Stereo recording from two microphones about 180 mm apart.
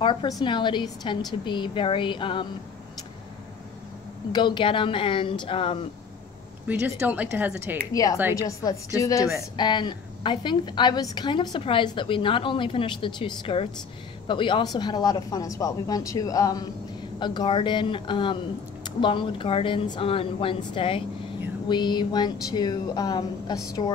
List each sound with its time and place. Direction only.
0.0 s a woman's voice: 25° left (ahead or behind)
4.3 s a woman's voice: 25° left (ahead or behind)
6.7 s speech: 10° right (ahead or behind)
7.9 s a woman's voice: 20° left (ahead or behind)